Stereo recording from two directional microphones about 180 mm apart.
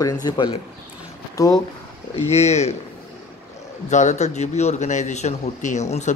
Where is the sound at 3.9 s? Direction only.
40° left (ahead or behind).